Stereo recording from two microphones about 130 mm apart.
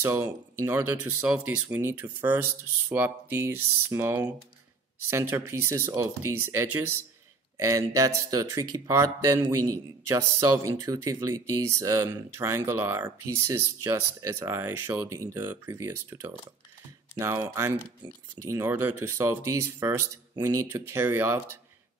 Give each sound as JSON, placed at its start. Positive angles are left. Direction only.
{"t": 0.0, "sound": "speech", "side_deg": -20}